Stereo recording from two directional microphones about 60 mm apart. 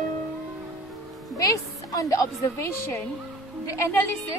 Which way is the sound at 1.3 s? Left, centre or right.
Left.